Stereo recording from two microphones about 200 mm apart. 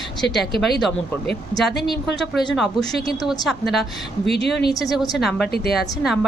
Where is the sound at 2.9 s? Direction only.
50° left (ahead or behind).